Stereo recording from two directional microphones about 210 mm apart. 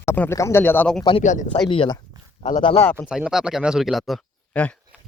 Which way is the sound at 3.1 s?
5° right (ahead or behind).